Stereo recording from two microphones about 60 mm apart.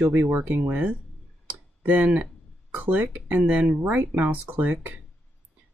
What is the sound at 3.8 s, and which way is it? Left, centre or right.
Speech, right.